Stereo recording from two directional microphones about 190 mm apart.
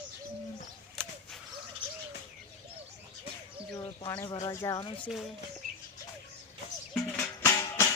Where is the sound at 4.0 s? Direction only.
20° left (ahead or behind).